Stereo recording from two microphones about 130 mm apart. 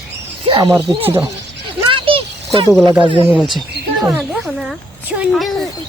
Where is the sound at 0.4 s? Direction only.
35° right (ahead or behind).